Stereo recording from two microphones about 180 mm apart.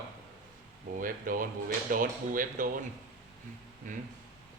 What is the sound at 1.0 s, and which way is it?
Speech, 50° right (ahead or behind).